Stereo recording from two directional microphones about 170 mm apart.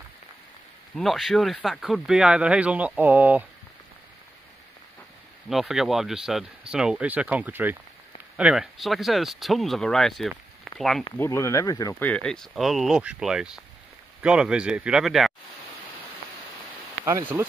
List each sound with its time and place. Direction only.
0.9 s speech: centre (ahead or behind)
5.5 s speech: centre (ahead or behind)
11.1 s speech: 15° left (ahead or behind); by 15.3 s centre (ahead or behind)
17.4 s speech: 15° right (ahead or behind)